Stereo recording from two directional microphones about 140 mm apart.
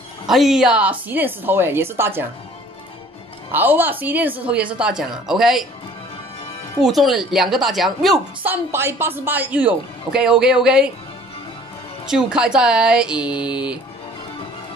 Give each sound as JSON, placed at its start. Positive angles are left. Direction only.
{"t": 0.3, "sound": "speech", "side_deg": 0}
{"t": 3.5, "sound": "a woman's voice", "side_deg": -15}
{"t": 6.8, "sound": "a woman's voice", "side_deg": 0}
{"t": 8.5, "sound": "speech", "side_deg": -15}
{"t": 12.1, "sound": "speech", "side_deg": -5}